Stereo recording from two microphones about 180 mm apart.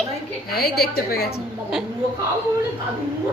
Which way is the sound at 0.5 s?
60° left (ahead or behind).